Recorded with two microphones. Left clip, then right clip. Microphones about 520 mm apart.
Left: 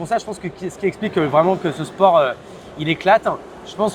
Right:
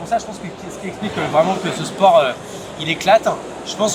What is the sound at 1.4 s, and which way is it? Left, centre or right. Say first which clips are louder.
A man's voice: right 2 dB; left.